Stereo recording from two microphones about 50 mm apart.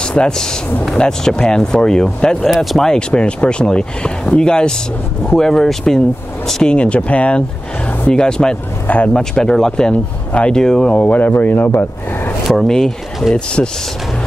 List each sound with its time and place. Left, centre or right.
0.0 s speech: centre
2.5 s speech: centre
2.8 s speech: centre
6.7 s speech: left
8.8 s speech: left
9.1 s speech: centre; by 11.8 s left
12.4 s speech: centre